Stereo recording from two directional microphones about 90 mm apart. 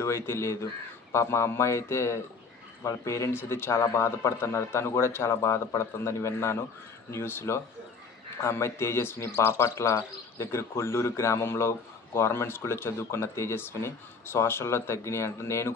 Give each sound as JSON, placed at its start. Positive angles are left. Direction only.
{"t": 0.0, "sound": "speech", "side_deg": 30}